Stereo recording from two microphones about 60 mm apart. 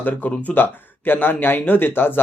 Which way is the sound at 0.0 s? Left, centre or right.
Left.